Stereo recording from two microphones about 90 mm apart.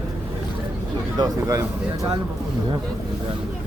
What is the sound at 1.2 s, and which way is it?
Speech, 40° right (ahead or behind).